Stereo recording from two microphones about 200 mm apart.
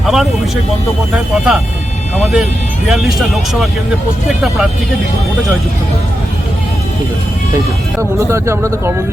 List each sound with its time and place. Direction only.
0.0 s speech: centre (ahead or behind)
8.2 s speech: 15° right (ahead or behind)